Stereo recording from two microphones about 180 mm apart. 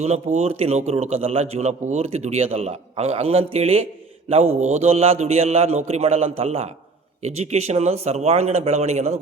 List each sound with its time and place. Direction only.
0.3 s speech: 35° right (ahead or behind)